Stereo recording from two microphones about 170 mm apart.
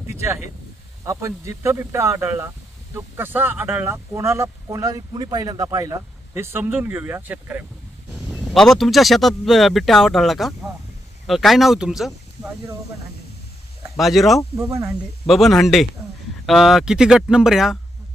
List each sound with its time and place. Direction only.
0.0 s a sound: 15° right (ahead or behind)
1.0 s speech: 15° right (ahead or behind)
8.1 s speech: centre (ahead or behind)
13.9 s speech: centre (ahead or behind)
14.6 s speech: 15° right (ahead or behind)
15.2 s speech: centre (ahead or behind)